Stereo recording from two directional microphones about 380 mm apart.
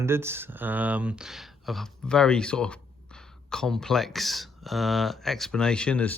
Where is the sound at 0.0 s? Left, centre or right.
Centre.